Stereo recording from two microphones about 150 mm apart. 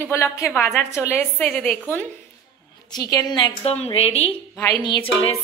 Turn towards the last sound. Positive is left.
turn(degrees=40)  # may be behind; listen again after turning